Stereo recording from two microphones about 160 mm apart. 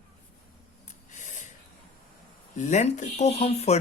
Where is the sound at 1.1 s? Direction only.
50° left (ahead or behind).